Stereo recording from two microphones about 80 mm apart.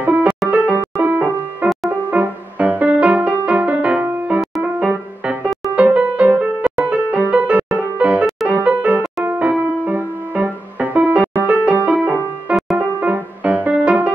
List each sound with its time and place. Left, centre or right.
0.0 s music: centre